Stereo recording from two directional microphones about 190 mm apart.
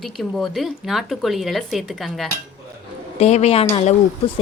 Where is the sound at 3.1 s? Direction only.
35° left (ahead or behind).